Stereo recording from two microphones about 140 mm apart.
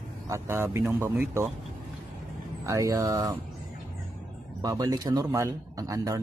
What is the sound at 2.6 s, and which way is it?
Speech, 25° right (ahead or behind).